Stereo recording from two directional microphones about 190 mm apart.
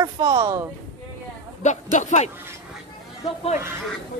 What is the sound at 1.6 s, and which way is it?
Speech, 40° left (ahead or behind).